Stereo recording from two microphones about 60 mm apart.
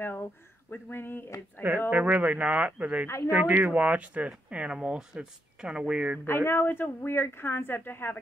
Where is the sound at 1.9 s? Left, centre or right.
Right.